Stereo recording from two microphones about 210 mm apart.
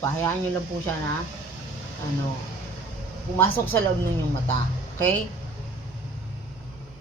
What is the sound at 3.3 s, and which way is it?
Speech, 10° left (ahead or behind).